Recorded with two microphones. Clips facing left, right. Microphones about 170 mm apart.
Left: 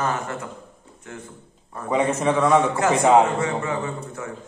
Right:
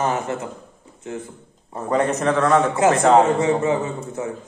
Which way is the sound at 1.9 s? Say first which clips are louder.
Right 1 dB; 5° left (ahead or behind).